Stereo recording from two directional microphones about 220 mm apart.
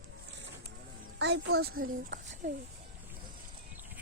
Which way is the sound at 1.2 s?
50° right (ahead or behind).